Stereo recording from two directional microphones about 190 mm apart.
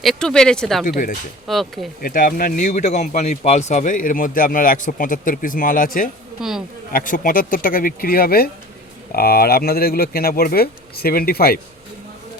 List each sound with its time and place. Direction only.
0.0 s speech: centre (ahead or behind)
0.9 s a man's voice: 45° left (ahead or behind)
1.5 s speech: centre (ahead or behind)
2.0 s a man's voice: 50° left (ahead or behind)
6.4 s speech: 5° right (ahead or behind)
6.9 s a man's voice: 45° left (ahead or behind)